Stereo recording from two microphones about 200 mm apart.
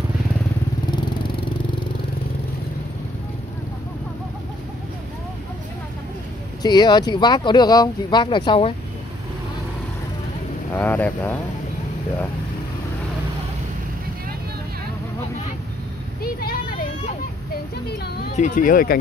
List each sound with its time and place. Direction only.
6.6 s speech: 20° left (ahead or behind)
10.7 s speech: 10° left (ahead or behind)
16.2 s vehicle: 50° left (ahead or behind)
17.8 s a sound: 55° left (ahead or behind)
18.3 s speech: 40° left (ahead or behind)